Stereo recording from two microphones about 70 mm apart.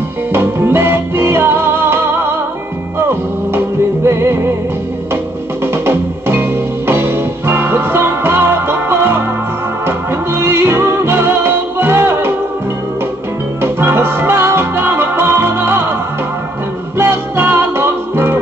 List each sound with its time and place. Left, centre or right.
0.3 s music: right
13.6 s music: right
17.0 s music: right